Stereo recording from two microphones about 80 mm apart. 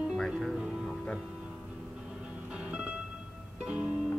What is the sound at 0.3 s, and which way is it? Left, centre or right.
Music, centre.